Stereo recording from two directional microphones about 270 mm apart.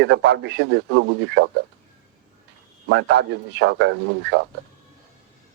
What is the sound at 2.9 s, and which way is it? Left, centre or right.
Speech, right.